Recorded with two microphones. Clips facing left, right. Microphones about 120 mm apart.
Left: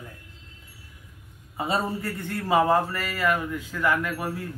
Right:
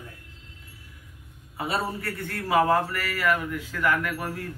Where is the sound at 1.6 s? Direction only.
20° left (ahead or behind).